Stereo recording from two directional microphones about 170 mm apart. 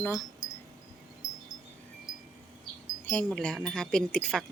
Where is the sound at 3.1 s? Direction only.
10° left (ahead or behind).